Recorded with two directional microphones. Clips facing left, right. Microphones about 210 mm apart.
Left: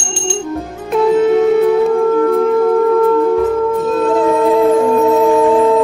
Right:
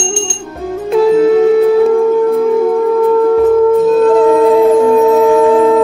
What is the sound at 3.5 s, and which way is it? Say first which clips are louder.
Wind instrument: right 7 dB; centre (ahead or behind).